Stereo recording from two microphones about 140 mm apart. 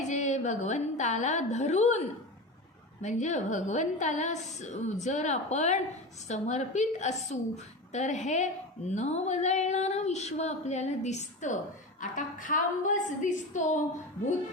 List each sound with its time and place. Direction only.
0.1 s a woman's voice: 55° left (ahead or behind)
3.0 s a woman's voice: 55° left (ahead or behind)
11.9 s a woman's voice: 70° left (ahead or behind)